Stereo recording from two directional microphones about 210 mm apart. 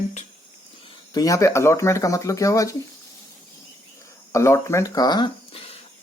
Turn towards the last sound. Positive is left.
turn(degrees=25)  # may be behind; listen again after turning